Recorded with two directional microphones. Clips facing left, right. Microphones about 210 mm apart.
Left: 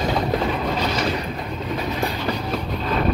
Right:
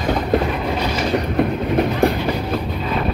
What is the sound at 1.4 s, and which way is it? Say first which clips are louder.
Train: right 10 dB; 60° right (ahead or behind).